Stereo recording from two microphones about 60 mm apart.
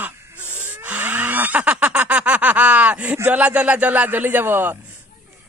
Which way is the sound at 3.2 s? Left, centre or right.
Right.